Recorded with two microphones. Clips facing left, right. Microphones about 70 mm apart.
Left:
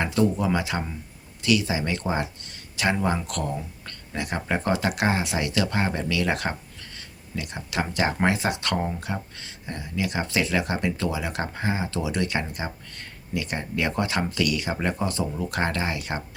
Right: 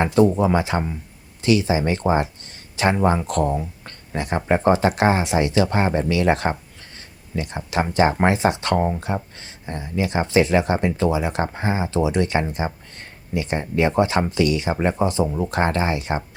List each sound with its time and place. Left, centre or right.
0.0 s speech: right